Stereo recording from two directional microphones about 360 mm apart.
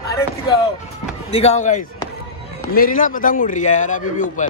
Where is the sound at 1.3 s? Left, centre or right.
Centre.